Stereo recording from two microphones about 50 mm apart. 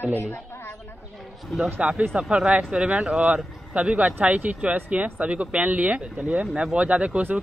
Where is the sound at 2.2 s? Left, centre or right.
Centre.